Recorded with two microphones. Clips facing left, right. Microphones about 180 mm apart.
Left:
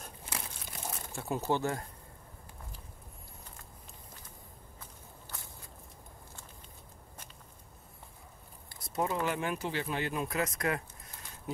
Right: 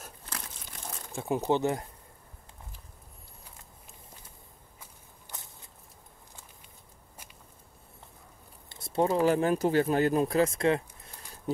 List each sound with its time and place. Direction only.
1.1 s speech: 15° right (ahead or behind)
5.3 s walk: 20° right (ahead or behind)
8.6 s speech: 25° right (ahead or behind)